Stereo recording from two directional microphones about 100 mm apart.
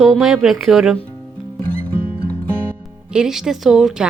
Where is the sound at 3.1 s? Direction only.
5° right (ahead or behind).